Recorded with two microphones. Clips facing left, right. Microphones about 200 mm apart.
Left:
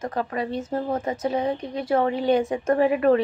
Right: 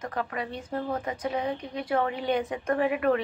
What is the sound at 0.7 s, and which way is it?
A woman's voice, 25° left (ahead or behind).